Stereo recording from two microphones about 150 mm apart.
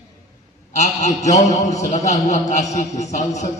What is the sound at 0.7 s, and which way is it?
A man's voice, 50° left (ahead or behind).